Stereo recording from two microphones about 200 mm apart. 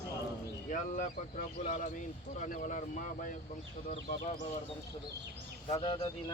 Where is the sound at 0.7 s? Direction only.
40° left (ahead or behind).